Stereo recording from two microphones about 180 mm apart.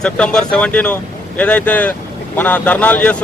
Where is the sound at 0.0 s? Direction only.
5° left (ahead or behind).